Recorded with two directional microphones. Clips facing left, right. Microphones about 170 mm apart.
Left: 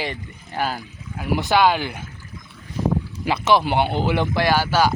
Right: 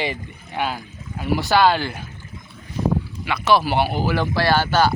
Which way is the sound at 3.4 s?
20° left (ahead or behind).